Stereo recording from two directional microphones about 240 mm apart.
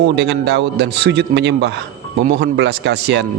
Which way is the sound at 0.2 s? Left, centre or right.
Right.